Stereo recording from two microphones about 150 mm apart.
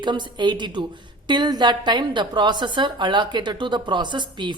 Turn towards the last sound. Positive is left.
turn(degrees=-30)  # may be behind; listen again after turning